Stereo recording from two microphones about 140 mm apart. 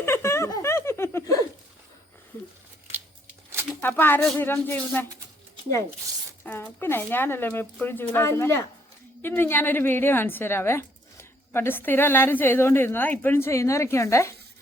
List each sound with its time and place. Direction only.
0.0 s giggle: 20° left (ahead or behind)
3.8 s a woman's voice: 15° left (ahead or behind)
6.4 s a woman's voice: 15° left (ahead or behind)